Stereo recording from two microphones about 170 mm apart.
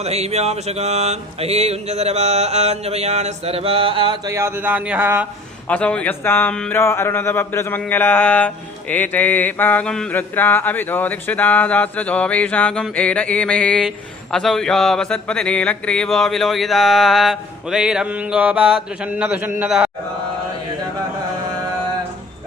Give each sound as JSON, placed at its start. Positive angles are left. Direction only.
{"t": 0.0, "sound": "mantra", "side_deg": -40}
{"t": 5.6, "sound": "speech", "side_deg": 5}